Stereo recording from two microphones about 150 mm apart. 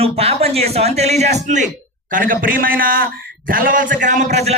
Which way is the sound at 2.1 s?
70° right (ahead or behind).